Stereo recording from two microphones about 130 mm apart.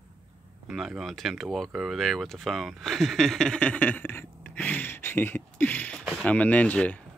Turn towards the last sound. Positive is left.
turn(degrees=10)  # may be behind; listen again after turning